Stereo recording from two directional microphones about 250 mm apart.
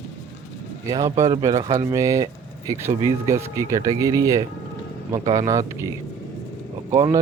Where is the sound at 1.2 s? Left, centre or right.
Centre.